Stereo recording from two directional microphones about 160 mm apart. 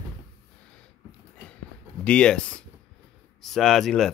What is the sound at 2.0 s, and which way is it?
Speech, 5° left (ahead or behind).